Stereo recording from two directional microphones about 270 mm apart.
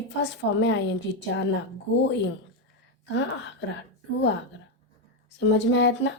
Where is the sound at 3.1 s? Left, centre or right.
Left.